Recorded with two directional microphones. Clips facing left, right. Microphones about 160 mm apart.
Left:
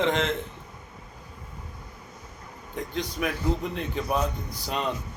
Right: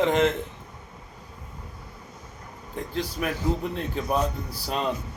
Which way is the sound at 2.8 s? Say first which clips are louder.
Even; 5° right (ahead or behind).